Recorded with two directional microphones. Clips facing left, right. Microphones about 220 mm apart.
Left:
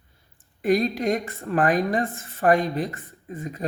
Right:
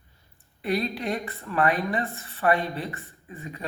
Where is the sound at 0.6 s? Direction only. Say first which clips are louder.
Left 6 dB; 45° left (ahead or behind).